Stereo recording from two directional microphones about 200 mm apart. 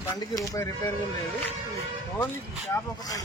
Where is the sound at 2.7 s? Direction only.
20° left (ahead or behind).